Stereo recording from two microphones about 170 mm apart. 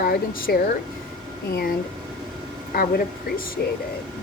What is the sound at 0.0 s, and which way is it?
Speech, 60° left (ahead or behind).